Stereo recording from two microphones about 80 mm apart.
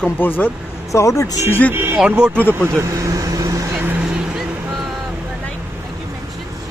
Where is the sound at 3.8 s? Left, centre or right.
Right.